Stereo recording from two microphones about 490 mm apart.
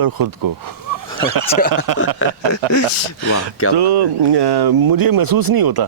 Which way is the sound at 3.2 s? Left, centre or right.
Right.